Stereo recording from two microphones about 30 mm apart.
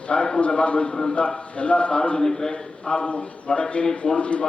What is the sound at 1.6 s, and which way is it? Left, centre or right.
Speech, left.